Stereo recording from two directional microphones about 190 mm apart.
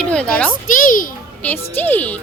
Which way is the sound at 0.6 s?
45° left (ahead or behind).